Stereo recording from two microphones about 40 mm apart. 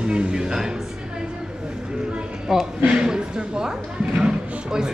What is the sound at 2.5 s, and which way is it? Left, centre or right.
Speech, centre.